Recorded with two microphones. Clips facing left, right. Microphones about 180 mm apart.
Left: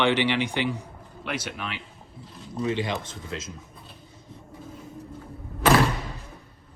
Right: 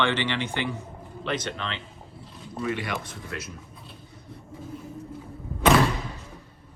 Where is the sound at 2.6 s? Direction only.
25° left (ahead or behind).